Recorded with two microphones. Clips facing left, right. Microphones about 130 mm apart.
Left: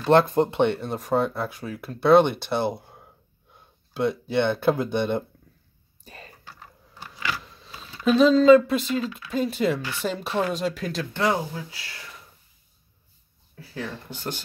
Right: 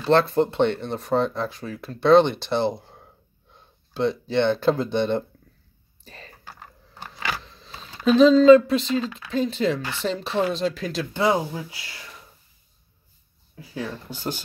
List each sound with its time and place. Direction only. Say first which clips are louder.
0.0 s speech: left 1 dB; 15° left (ahead or behind)
6.0 s typing: even; 5° left (ahead or behind)
6.4 s a sound: right 2 dB; 50° right (ahead or behind)
7.4 s a sound: even; 5° left (ahead or behind)
8.2 s speech: right 2 dB; 5° left (ahead or behind)
11.1 s speech: right 3 dB; 15° right (ahead or behind)
13.6 s speech: right 2 dB; 15° right (ahead or behind)